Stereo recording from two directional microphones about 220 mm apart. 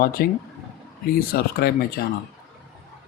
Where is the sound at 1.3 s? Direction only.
45° left (ahead or behind).